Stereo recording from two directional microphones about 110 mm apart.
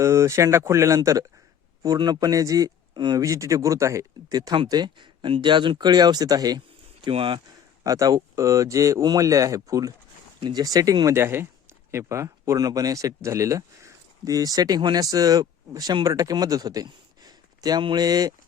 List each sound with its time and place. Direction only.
0.0 s speech: 25° right (ahead or behind)
7.1 s speech: 50° right (ahead or behind)
7.9 s speech: 30° right (ahead or behind)